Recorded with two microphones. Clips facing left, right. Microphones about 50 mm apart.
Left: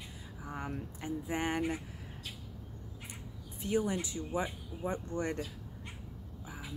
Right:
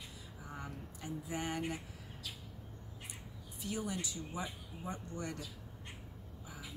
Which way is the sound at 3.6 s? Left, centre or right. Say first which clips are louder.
Left 8 dB; left.